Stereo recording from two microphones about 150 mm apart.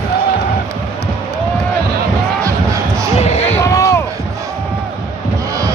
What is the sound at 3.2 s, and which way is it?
Basketball bounce, 45° left (ahead or behind).